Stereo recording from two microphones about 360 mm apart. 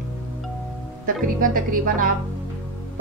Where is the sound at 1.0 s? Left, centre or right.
Right.